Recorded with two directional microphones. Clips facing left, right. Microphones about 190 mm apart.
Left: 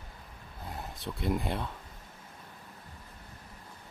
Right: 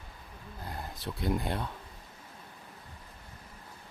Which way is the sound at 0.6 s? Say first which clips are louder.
Even; centre (ahead or behind).